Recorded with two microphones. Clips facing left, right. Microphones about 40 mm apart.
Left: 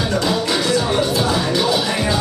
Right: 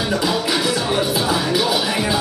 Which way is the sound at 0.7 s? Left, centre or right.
Centre.